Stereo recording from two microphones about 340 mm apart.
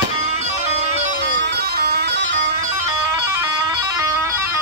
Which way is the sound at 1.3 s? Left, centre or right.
Right.